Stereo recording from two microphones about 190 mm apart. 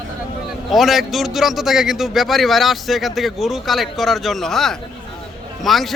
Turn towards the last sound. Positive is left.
turn(degrees=0)  # may be behind; listen again after turning